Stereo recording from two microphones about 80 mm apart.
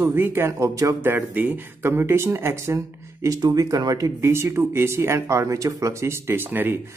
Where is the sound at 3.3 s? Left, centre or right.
Right.